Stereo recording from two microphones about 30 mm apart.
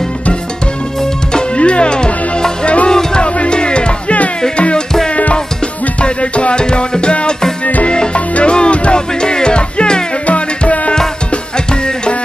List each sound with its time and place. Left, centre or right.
1.6 s music: left
2.6 s music: left
3.2 s music: left
6.0 s music: left
6.5 s music: left
10.2 s music: left